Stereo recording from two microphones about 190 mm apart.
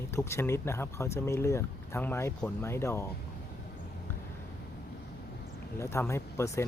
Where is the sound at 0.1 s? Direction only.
15° left (ahead or behind).